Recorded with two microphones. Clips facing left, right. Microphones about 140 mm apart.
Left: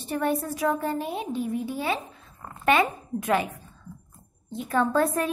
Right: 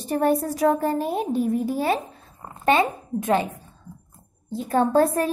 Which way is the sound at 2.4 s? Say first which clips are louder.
Right 2 dB; 30° right (ahead or behind).